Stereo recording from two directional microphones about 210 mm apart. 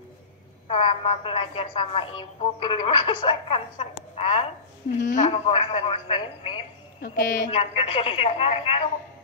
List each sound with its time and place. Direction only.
0.7 s a woman's voice: 25° left (ahead or behind)
7.0 s a woman's voice: 40° left (ahead or behind)